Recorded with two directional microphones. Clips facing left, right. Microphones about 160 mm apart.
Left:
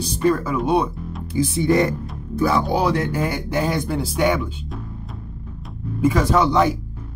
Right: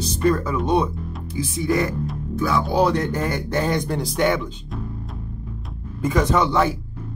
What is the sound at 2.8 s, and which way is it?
Speech, 10° left (ahead or behind).